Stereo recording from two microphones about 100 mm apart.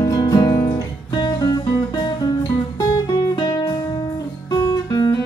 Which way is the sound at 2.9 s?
40° left (ahead or behind).